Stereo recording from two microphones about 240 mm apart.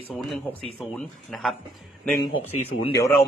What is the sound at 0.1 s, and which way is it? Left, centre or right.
Speech, centre.